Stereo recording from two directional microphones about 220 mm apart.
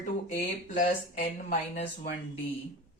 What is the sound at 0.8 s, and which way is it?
Speech, 35° left (ahead or behind).